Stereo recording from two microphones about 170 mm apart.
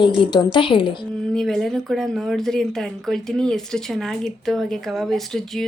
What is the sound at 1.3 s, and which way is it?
Speech, centre (ahead or behind).